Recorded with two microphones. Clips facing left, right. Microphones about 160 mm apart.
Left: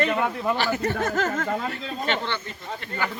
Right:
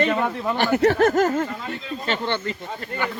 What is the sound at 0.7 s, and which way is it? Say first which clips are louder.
Speech: right 9 dB; 85° right.